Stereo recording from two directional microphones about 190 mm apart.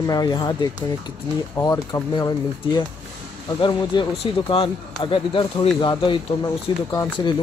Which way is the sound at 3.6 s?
25° left (ahead or behind).